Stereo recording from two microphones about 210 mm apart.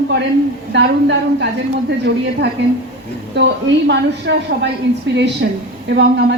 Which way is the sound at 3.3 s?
55° right (ahead or behind).